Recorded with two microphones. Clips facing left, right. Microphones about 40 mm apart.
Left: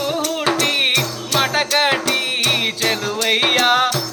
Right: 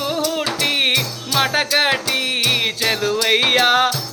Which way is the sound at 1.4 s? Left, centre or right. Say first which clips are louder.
Even; centre.